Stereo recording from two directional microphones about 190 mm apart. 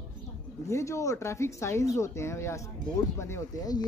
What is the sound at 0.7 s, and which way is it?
Speech, 15° left (ahead or behind).